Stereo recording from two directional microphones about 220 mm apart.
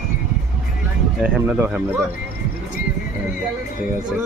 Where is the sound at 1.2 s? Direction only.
5° right (ahead or behind).